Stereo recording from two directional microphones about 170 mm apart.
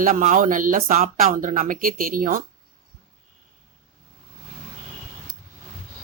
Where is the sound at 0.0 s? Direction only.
50° right (ahead or behind).